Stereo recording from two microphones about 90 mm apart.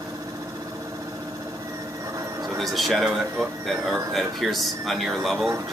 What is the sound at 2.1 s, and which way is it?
Vehicle, 40° right (ahead or behind).